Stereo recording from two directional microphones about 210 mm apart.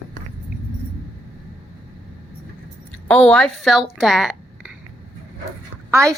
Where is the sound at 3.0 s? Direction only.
5° left (ahead or behind).